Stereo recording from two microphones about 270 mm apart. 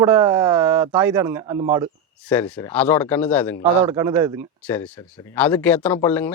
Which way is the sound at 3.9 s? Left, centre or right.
Centre.